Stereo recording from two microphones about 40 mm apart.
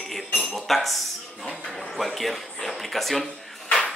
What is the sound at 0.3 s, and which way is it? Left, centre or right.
Cutlery, left.